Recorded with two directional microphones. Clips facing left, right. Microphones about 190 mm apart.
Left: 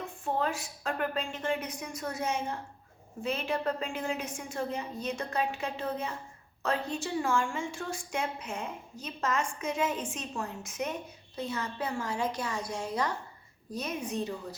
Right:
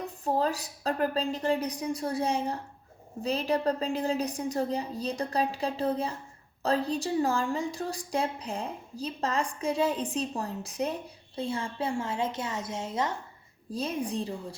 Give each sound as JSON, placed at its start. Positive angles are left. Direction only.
{"t": 0.0, "sound": "a woman's voice", "side_deg": -35}